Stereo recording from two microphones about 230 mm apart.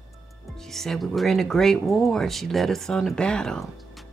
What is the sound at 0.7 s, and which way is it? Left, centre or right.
Speech, centre.